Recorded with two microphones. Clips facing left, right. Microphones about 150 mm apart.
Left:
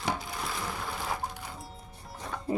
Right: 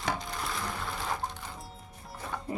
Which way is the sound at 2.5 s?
30° left (ahead or behind).